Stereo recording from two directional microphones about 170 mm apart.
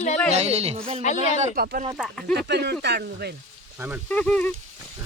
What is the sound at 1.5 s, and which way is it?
Speech, 60° right (ahead or behind).